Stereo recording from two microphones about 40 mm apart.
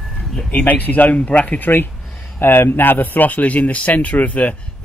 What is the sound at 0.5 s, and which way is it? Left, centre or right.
Speech, left.